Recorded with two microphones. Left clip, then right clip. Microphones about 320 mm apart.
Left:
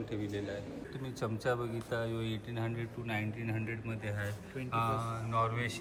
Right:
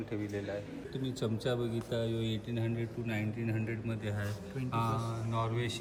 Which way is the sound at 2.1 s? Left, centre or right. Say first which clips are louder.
Right 2 dB; centre.